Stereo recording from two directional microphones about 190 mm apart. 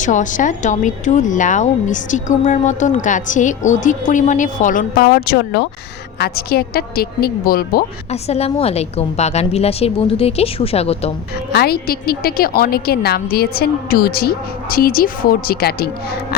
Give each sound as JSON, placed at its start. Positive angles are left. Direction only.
{"t": 0.0, "sound": "a woman's voice", "side_deg": 40}
{"t": 8.1, "sound": "speech", "side_deg": 35}
{"t": 11.5, "sound": "a woman's voice", "side_deg": 55}